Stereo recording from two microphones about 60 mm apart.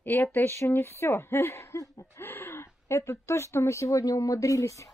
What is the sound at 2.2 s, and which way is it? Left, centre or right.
Speech, left.